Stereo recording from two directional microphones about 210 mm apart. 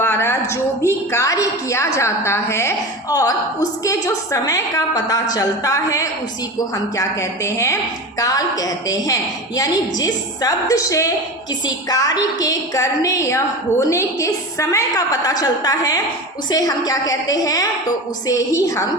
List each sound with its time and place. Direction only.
0.0 s a woman's voice: 10° left (ahead or behind)